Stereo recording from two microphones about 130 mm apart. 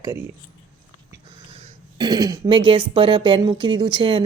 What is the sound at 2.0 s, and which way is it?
Speech, 30° right (ahead or behind).